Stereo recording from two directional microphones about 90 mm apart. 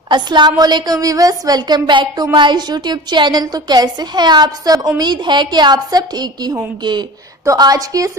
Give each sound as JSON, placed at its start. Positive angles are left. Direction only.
{"t": 0.1, "sound": "a woman's voice", "side_deg": -55}
{"t": 7.4, "sound": "a woman's voice", "side_deg": -45}